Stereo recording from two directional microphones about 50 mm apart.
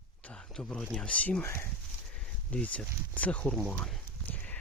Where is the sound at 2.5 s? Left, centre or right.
Left.